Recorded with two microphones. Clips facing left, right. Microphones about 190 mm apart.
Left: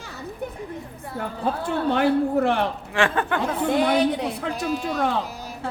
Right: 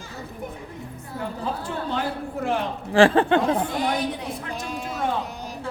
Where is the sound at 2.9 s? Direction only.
30° right (ahead or behind).